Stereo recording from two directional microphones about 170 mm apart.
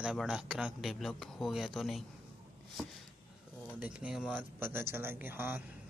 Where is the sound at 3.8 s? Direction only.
5° right (ahead or behind).